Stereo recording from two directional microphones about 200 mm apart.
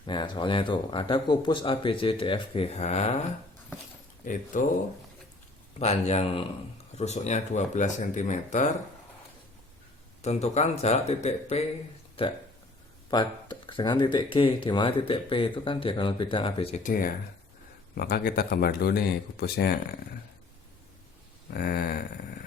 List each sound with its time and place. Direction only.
0.0 s speech: 25° left (ahead or behind)
4.2 s speech: 40° left (ahead or behind)
5.8 s speech: 35° left (ahead or behind)
10.2 s speech: 35° left (ahead or behind)
16.8 s speech: 45° left (ahead or behind)
21.5 s speech: 45° left (ahead or behind)